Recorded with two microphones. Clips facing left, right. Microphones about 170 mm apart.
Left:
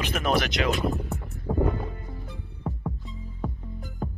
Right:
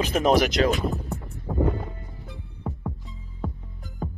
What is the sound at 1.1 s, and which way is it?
Music, centre (ahead or behind).